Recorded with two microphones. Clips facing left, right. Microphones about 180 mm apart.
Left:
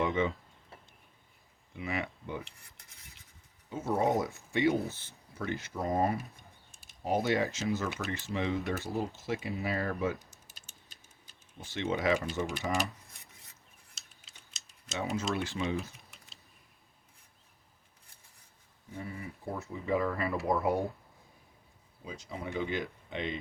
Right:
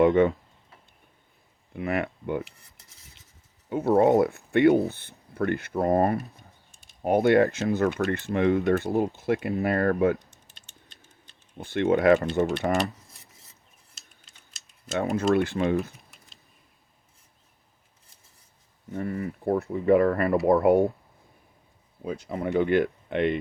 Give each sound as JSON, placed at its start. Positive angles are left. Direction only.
{"t": 0.0, "sound": "speech", "side_deg": -55}
{"t": 1.7, "sound": "speech", "side_deg": -60}
{"t": 3.7, "sound": "speech", "side_deg": -60}
{"t": 6.1, "sound": "typing", "side_deg": 0}
{"t": 7.0, "sound": "speech", "side_deg": -60}
{"t": 11.5, "sound": "speech", "side_deg": -60}
{"t": 14.8, "sound": "speech", "side_deg": -55}
{"t": 18.9, "sound": "speech", "side_deg": -60}
{"t": 22.0, "sound": "speech", "side_deg": -55}